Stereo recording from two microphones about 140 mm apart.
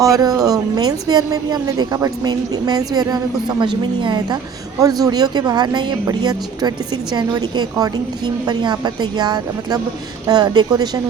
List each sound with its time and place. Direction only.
0.0 s a woman's voice: 25° right (ahead or behind)